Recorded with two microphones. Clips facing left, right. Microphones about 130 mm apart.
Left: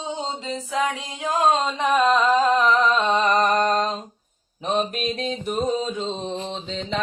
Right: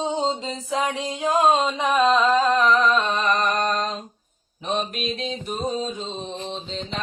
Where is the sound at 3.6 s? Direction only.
40° left (ahead or behind).